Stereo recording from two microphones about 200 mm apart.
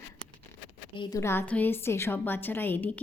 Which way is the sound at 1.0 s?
15° left (ahead or behind).